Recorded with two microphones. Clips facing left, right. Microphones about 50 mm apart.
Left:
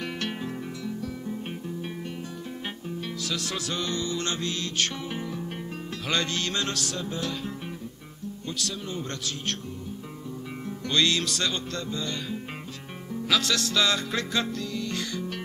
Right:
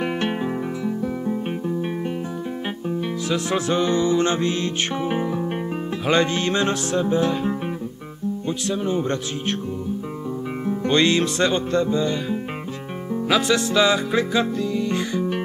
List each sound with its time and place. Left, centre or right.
0.0 s music: right
3.3 s music: right
10.7 s music: right